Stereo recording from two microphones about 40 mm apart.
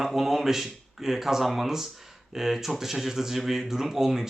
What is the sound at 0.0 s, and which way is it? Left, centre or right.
Speech, centre.